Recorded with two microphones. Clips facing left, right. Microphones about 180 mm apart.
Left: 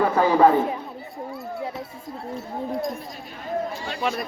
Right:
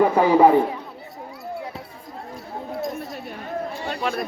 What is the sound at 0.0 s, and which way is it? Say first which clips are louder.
Speech: right 2 dB; 15° right (ahead or behind).